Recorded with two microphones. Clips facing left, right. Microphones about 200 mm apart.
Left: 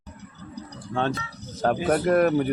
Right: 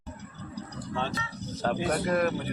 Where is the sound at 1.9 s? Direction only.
55° left (ahead or behind).